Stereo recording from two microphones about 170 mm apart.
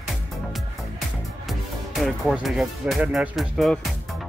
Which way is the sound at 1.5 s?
Centre (ahead or behind).